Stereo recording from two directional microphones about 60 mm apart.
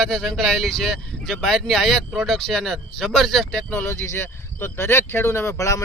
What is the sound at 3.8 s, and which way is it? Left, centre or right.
Speech, left.